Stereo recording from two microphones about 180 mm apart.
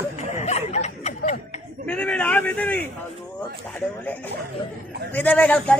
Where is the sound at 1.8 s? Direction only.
5° left (ahead or behind).